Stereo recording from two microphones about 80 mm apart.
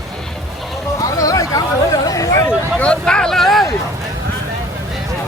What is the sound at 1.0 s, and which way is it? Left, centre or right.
Chatter, left.